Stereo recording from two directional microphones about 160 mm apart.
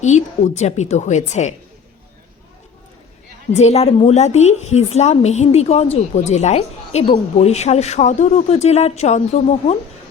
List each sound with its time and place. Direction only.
0.0 s a woman's voice: 45° left (ahead or behind)
3.5 s a woman's voice: 45° left (ahead or behind)